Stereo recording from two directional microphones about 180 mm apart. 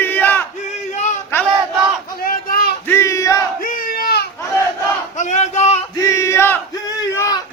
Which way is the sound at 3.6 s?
55° left (ahead or behind).